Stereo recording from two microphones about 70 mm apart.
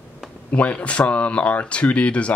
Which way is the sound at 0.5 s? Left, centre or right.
Centre.